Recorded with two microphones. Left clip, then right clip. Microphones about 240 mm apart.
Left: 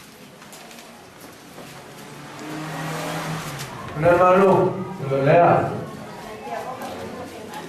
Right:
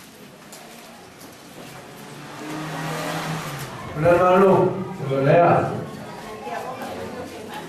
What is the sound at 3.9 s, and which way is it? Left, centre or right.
A man's voice, centre.